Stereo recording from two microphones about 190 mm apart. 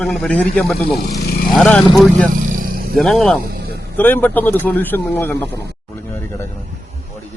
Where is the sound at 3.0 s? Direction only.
Centre (ahead or behind).